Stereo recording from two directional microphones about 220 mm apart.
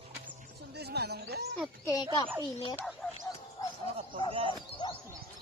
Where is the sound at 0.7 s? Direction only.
45° right (ahead or behind).